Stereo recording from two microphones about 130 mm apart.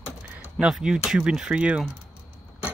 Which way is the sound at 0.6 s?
5° right (ahead or behind).